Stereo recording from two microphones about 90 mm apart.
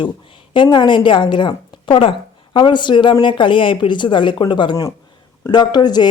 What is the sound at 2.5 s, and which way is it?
Speech, 60° left (ahead or behind).